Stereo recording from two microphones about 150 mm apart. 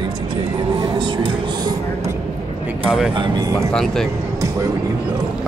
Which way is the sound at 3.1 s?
30° right (ahead or behind).